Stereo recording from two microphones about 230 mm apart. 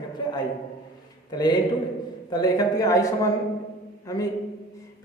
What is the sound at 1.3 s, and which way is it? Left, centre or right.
A man's voice, centre.